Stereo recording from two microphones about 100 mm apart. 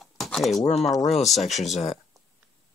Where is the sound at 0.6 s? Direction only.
90° left.